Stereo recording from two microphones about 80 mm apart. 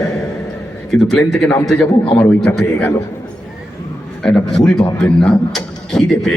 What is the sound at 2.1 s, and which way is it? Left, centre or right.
Speech, left.